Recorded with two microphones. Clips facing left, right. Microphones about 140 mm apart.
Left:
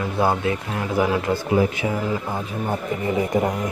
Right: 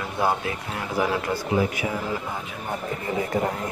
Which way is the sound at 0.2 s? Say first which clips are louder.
Left 3 dB; 25° left (ahead or behind).